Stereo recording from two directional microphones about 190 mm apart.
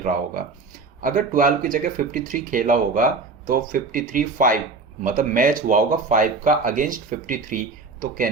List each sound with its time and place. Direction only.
0.0 s speech: 45° right (ahead or behind)